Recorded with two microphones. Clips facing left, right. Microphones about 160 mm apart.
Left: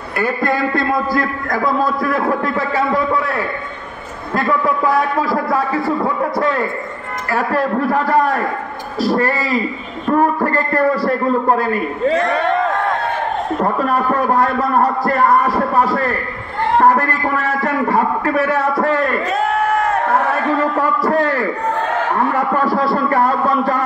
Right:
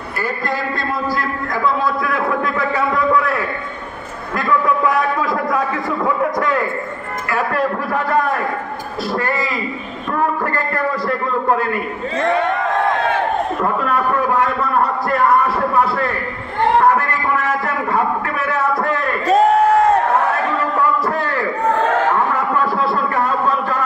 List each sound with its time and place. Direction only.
0.2 s a man's voice: 55° left (ahead or behind); by 2.5 s 35° left (ahead or behind)
4.4 s a man's voice: 30° left (ahead or behind)
7.2 s a man's voice: 35° left (ahead or behind)
9.0 s a man's voice: 35° left (ahead or behind)
14.3 s a man's voice: 35° left (ahead or behind)
17.8 s a man's voice: 35° left (ahead or behind)
19.2 s a sound: 40° right (ahead or behind)
22.8 s a sound: 35° left (ahead or behind)